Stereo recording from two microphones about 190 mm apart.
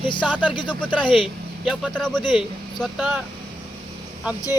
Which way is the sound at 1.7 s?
5° left (ahead or behind).